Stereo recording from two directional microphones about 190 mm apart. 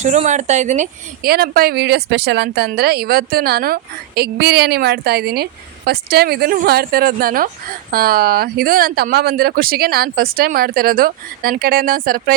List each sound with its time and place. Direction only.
0.0 s speech: 40° right (ahead or behind)
1.3 s speech: 50° right (ahead or behind)